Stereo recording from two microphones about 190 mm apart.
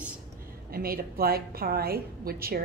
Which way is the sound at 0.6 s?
50° right (ahead or behind).